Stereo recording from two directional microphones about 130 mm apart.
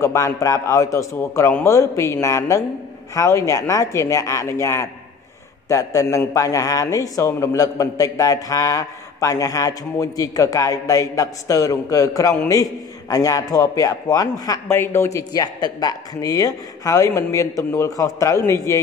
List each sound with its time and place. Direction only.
0.0 s a man's voice: 25° left (ahead or behind)